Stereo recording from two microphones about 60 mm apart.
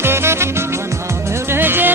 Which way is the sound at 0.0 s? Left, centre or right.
Right.